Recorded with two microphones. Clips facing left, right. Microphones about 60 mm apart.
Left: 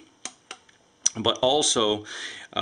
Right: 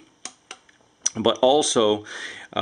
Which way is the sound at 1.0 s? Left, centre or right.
Centre.